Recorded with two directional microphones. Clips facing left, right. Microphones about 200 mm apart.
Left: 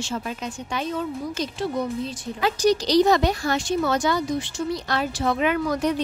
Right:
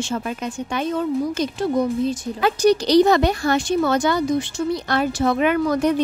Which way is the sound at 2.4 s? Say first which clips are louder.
Right 4 dB; 60° right (ahead or behind).